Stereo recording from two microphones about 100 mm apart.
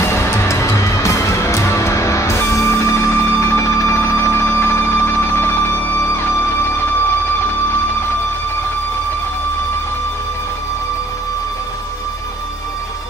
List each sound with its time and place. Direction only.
0.0 s music: 25° left (ahead or behind)